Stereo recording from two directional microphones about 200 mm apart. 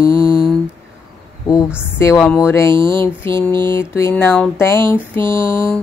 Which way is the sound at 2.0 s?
15° left (ahead or behind).